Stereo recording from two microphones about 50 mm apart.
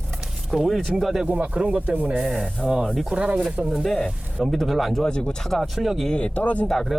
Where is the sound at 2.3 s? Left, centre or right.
Centre.